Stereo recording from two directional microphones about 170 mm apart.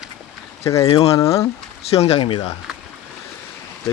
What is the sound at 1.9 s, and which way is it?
Speech, 40° left (ahead or behind).